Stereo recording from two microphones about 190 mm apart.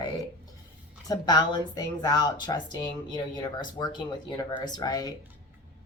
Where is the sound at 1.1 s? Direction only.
20° left (ahead or behind).